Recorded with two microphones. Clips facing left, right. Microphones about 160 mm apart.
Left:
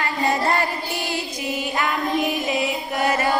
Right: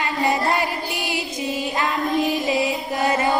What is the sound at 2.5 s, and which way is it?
Chant, 25° right (ahead or behind).